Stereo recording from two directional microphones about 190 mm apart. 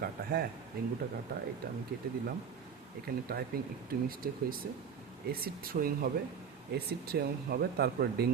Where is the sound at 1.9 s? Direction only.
50° right (ahead or behind).